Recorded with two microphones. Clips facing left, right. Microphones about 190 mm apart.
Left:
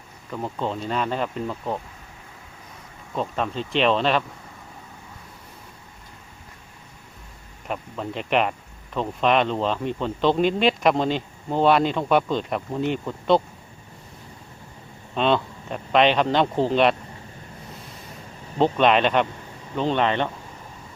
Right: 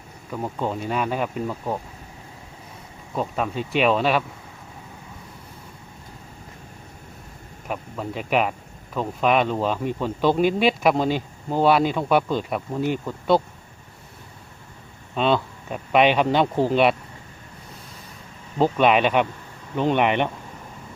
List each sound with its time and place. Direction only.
0.3 s speech: 5° right (ahead or behind)
3.2 s speech: 5° right (ahead or behind)
7.7 s speech: 5° right (ahead or behind)
15.1 s speech: 5° right (ahead or behind)
18.6 s speech: 10° right (ahead or behind)